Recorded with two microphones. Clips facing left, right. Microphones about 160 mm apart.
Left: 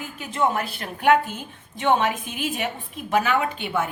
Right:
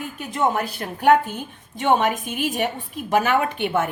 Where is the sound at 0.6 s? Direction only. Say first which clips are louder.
Right 3 dB; 40° right (ahead or behind).